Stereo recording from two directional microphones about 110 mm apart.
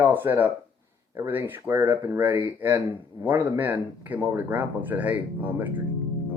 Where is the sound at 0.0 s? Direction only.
20° right (ahead or behind).